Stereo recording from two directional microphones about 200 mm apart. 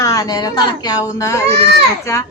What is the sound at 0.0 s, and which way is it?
A woman's voice, 15° left (ahead or behind).